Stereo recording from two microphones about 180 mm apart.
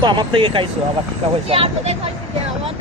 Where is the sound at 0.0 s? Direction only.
25° right (ahead or behind).